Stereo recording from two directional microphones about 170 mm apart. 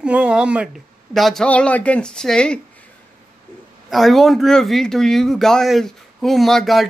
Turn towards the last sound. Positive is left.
turn(degrees=0)  # may be behind; listen again after turning